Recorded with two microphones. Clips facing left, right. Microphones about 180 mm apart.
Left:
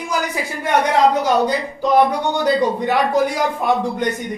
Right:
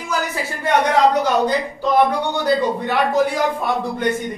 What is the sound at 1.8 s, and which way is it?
Speech, 15° left (ahead or behind).